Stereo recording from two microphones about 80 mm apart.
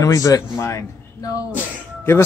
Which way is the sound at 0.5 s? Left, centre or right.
Left.